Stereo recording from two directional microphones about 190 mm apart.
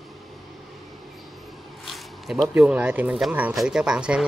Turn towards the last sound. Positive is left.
turn(degrees=-5)  # may be behind; listen again after turning